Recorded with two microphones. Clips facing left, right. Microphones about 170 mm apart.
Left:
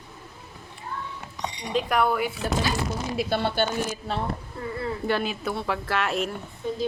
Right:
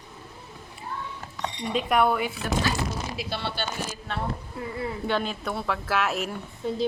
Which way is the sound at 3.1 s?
50° left (ahead or behind).